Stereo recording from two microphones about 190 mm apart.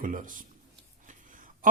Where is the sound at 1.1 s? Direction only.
45° right (ahead or behind).